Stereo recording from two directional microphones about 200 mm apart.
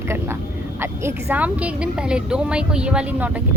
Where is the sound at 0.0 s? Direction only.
10° right (ahead or behind).